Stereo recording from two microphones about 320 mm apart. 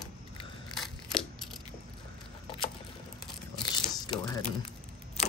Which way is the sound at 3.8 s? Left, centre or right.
Centre.